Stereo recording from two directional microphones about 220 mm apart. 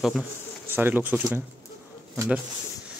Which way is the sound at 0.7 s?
10° right (ahead or behind).